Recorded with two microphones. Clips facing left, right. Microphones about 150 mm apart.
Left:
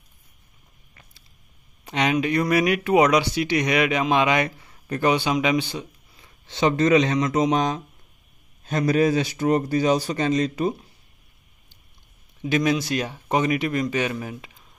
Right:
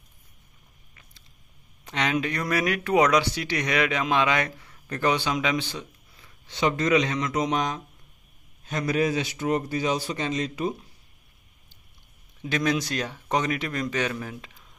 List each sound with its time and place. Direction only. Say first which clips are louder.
1.9 s speech: left 4 dB; 15° left (ahead or behind)
6.4 s a man's voice: left 5 dB; 30° left (ahead or behind)
12.4 s speech: left 4 dB; 10° left (ahead or behind)